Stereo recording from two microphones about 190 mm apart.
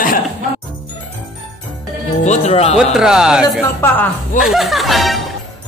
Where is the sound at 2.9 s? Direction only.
5° right (ahead or behind).